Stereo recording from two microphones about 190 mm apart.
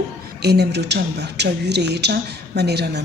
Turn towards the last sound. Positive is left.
turn(degrees=-60)  # may be behind; listen again after turning